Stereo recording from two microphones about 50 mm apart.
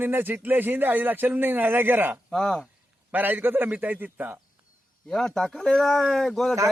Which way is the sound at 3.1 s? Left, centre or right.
Right.